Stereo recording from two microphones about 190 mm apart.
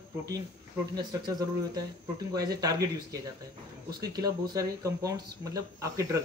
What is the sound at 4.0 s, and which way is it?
A man's voice, 20° right (ahead or behind).